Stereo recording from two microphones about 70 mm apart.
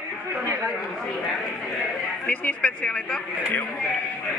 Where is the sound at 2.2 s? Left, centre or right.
Left.